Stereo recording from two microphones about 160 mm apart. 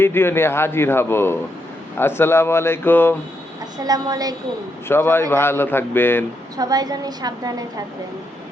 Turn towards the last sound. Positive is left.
turn(degrees=-25)  # may be behind; listen again after turning